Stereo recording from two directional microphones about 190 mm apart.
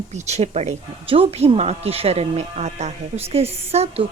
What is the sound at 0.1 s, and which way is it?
A woman's voice, 35° right (ahead or behind).